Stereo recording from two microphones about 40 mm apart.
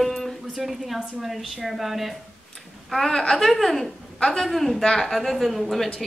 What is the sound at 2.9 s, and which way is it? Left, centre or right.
Speech, centre.